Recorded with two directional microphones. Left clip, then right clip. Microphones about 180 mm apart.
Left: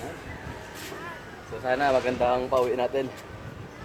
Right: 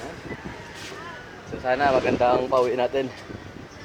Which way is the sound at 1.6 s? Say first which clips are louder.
Right 3 dB; 20° right (ahead or behind).